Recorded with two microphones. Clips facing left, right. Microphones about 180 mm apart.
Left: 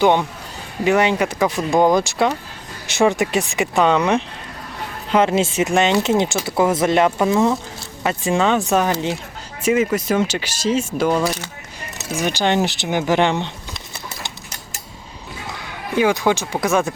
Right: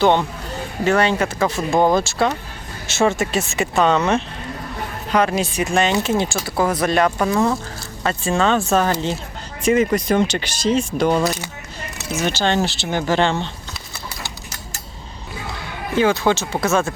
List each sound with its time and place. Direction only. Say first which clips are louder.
0.0 s speech: even; 15° left (ahead or behind)
16.0 s speech: even; 15° left (ahead or behind)